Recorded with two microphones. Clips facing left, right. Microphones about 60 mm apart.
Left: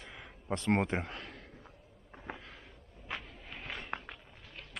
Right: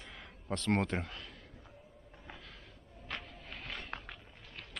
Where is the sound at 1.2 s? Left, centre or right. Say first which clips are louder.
Left 3 dB; left.